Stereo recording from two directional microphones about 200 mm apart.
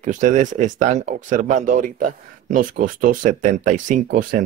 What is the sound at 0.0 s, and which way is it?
Speech, 40° right (ahead or behind).